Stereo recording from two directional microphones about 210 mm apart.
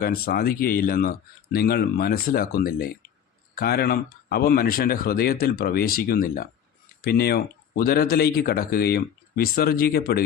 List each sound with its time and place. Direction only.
0.0 s speech: 45° left (ahead or behind)